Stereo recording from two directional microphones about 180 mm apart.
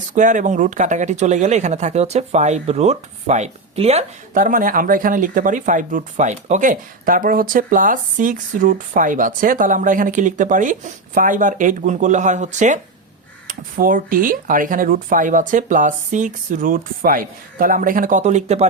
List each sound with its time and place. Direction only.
0.1 s speech: 45° right (ahead or behind)
4.4 s speech: 50° right (ahead or behind)